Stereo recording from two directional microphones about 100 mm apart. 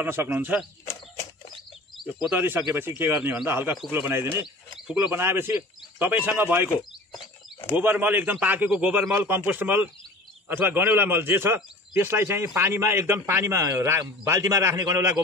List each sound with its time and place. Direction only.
0.0 s a man's voice: 20° right (ahead or behind)
2.2 s a man's voice: 20° right (ahead or behind)
4.7 s speech: 10° right (ahead or behind)
7.7 s a man's voice: 20° right (ahead or behind); by 15.0 s 35° right (ahead or behind)